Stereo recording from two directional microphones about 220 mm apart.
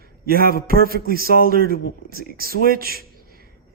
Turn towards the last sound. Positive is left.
turn(degrees=-45)  # may be behind; listen again after turning